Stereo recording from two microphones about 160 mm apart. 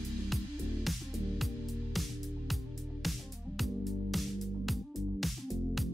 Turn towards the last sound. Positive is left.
turn(degrees=0)  # may be behind; listen again after turning